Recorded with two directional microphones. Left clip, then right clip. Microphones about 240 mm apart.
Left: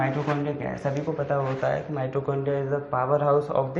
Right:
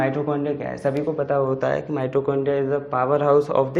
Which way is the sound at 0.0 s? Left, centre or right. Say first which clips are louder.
Right 4 dB; right.